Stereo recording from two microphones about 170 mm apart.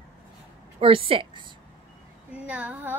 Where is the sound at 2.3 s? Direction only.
5° right (ahead or behind).